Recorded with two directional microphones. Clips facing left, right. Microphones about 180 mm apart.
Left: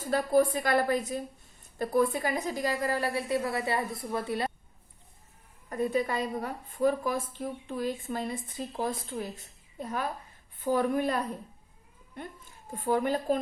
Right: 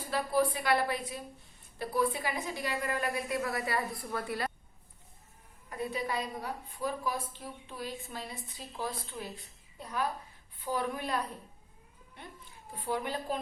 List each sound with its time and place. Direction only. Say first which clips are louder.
0.0 s a woman's voice: left 5 dB; 45° left (ahead or behind); by 4.5 s 25° left (ahead or behind)
5.6 s a woman's voice: left 7 dB; 45° left (ahead or behind)
12.7 s a woman's voice: left 7 dB; 45° left (ahead or behind)